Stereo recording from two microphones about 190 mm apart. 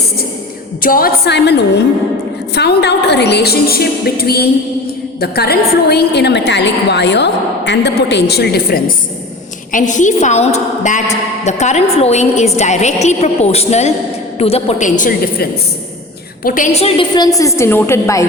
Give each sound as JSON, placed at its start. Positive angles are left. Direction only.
{"t": 0.8, "sound": "a woman's voice", "side_deg": 50}
{"t": 9.7, "sound": "a woman's voice", "side_deg": 40}